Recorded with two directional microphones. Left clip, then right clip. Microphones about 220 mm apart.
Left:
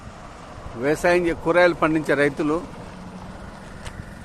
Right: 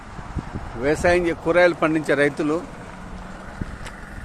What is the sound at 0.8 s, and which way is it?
Speech, centre (ahead or behind).